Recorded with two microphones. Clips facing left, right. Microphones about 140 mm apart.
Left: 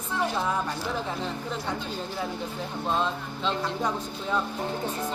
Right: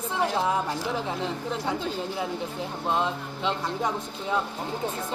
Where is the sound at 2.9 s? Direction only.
15° right (ahead or behind).